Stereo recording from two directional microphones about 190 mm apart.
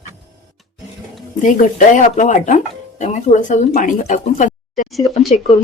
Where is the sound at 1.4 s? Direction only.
40° left (ahead or behind).